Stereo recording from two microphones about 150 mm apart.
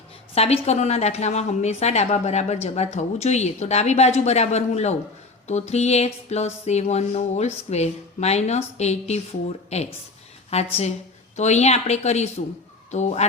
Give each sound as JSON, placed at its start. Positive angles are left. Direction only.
{"t": 0.3, "sound": "a woman's voice", "side_deg": 45}